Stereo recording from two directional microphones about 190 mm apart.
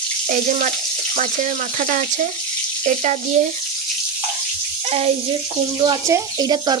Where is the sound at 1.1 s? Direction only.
40° right (ahead or behind).